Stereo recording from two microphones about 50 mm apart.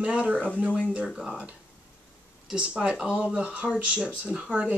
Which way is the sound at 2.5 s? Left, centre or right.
Right.